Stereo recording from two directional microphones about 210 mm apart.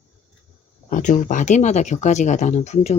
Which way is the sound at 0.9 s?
40° left (ahead or behind).